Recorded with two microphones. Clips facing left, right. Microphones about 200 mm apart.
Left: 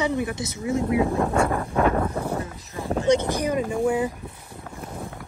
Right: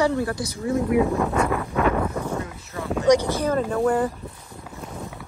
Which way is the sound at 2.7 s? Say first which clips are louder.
Even; 15° left (ahead or behind).